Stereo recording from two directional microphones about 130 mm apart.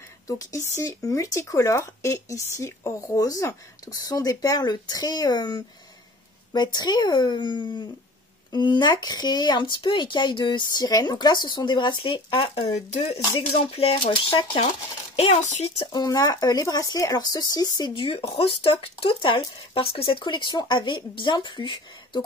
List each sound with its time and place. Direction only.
0.5 s speech: 25° left (ahead or behind); by 12.7 s 40° left (ahead or behind)
12.7 s speech: 55° left (ahead or behind)
13.7 s speech: 45° left (ahead or behind)
15.1 s speech: 60° left (ahead or behind)
15.8 s speech: 30° left (ahead or behind)